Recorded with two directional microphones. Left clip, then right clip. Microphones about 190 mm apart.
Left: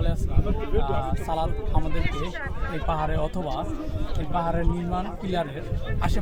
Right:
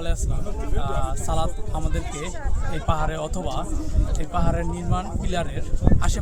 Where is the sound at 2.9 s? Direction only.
10° left (ahead or behind).